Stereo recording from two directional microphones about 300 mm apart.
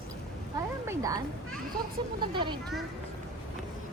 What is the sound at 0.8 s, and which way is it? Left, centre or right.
Speech, centre.